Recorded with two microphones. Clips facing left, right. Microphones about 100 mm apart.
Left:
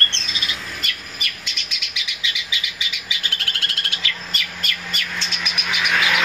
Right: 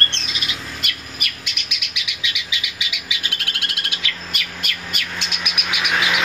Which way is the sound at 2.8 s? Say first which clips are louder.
Right 1 dB; 15° right (ahead or behind).